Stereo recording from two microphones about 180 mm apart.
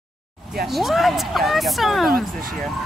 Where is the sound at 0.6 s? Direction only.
Centre (ahead or behind).